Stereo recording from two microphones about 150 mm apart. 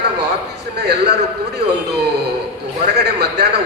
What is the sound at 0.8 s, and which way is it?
Speech, 90° right.